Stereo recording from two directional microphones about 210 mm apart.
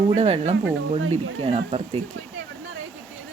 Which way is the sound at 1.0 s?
85° right.